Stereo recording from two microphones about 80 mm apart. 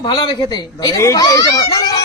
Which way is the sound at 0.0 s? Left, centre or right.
Left.